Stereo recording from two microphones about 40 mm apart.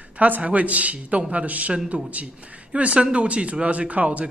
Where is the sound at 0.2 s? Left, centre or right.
Right.